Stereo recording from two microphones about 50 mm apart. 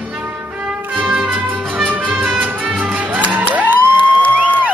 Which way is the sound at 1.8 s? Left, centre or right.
Right.